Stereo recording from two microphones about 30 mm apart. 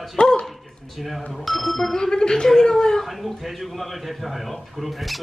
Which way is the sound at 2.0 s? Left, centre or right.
Left.